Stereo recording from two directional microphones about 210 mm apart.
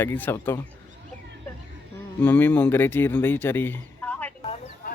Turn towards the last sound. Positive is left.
turn(degrees=5)  # may be behind; listen again after turning